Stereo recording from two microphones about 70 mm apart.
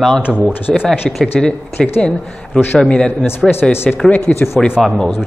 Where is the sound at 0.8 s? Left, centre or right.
Centre.